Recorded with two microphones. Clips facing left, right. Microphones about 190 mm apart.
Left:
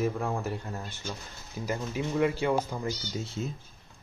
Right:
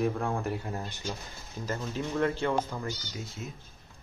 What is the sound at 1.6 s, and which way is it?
Speech, 10° left (ahead or behind).